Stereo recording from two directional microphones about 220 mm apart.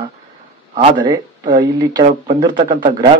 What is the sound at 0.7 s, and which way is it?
Speech, 25° right (ahead or behind).